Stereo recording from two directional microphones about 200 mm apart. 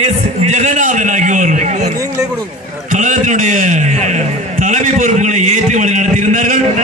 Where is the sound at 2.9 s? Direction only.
40° right (ahead or behind).